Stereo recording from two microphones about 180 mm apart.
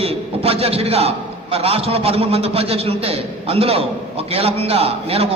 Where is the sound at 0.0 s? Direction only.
35° right (ahead or behind).